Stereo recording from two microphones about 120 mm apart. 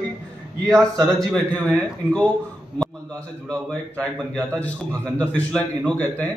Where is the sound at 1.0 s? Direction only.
Centre (ahead or behind).